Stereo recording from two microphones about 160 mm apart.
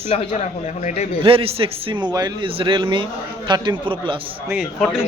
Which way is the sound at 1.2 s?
35° right (ahead or behind).